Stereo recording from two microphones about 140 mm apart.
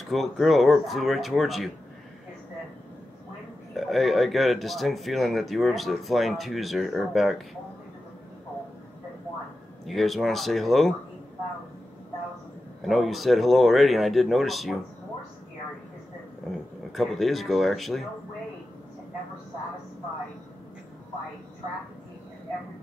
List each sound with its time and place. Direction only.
0.0 s speech: centre (ahead or behind)
3.7 s speech: centre (ahead or behind)
9.8 s speech: centre (ahead or behind)
12.8 s speech: centre (ahead or behind)
16.4 s a sound: centre (ahead or behind)
16.9 s speech: centre (ahead or behind)